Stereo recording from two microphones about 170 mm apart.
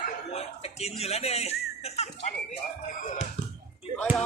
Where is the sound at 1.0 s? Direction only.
40° left (ahead or behind).